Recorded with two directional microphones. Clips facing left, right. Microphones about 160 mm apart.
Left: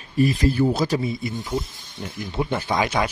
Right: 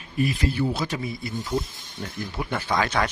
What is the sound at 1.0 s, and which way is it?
Speech, 20° left (ahead or behind).